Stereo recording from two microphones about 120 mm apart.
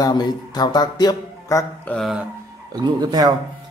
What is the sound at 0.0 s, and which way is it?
Speech, 35° left (ahead or behind).